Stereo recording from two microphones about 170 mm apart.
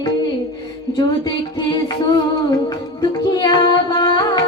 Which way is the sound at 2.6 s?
20° left (ahead or behind).